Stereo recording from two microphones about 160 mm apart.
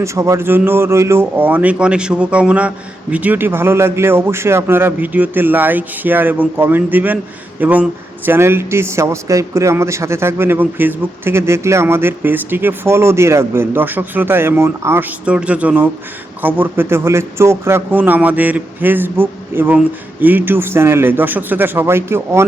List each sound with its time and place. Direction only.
0.0 s speech: 20° right (ahead or behind)